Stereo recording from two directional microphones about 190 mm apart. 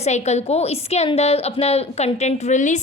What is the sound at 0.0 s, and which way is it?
A woman's voice, 35° left (ahead or behind).